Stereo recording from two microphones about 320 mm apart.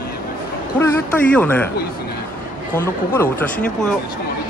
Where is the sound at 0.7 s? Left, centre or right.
Centre.